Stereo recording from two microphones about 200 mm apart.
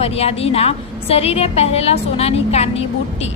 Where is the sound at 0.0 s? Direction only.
30° left (ahead or behind).